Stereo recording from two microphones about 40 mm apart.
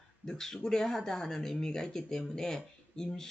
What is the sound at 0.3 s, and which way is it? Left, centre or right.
Speech, centre.